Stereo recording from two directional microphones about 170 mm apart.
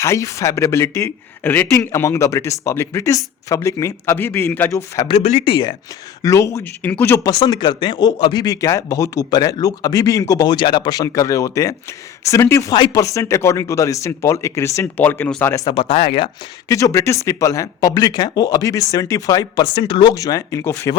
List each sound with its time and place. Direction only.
0.0 s speech: 20° left (ahead or behind)
5.0 s speech: 35° left (ahead or behind); by 7.3 s 15° left (ahead or behind)
7.3 s speech: 25° left (ahead or behind)
15.7 s speech: 35° left (ahead or behind)
16.6 s speech: 20° left (ahead or behind)